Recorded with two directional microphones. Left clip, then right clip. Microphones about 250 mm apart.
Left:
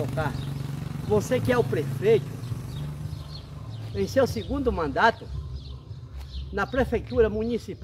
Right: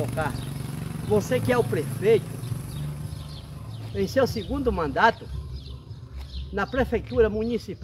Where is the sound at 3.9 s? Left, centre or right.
Centre.